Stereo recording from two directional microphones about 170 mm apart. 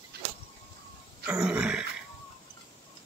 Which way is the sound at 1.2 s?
5° right (ahead or behind).